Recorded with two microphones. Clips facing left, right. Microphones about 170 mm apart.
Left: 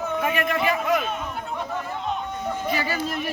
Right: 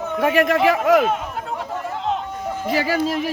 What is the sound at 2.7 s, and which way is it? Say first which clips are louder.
Speech: right 6 dB; 90° right.